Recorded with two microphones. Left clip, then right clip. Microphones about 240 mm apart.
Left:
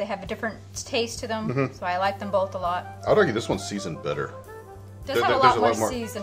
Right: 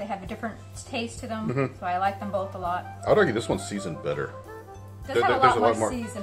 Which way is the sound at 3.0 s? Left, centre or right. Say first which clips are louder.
Left 1 dB; centre.